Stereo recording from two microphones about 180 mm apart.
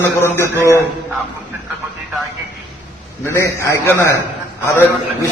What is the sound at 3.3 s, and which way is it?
A man's voice, 15° left (ahead or behind).